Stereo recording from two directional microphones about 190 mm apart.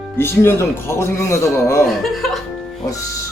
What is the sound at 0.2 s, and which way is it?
Speech, 10° left (ahead or behind).